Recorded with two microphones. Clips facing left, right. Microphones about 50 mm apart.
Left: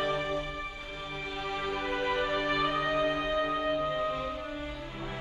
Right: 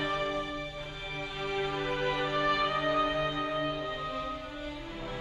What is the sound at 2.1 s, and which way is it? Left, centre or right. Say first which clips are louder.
Music: right 1 dB; centre.